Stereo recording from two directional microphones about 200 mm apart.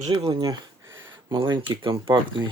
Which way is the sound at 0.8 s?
70° right (ahead or behind).